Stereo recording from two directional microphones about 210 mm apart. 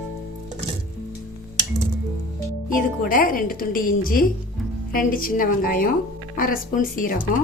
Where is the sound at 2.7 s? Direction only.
40° left (ahead or behind).